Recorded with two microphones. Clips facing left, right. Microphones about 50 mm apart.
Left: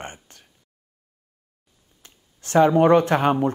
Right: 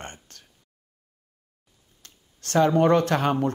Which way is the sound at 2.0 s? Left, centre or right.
Centre.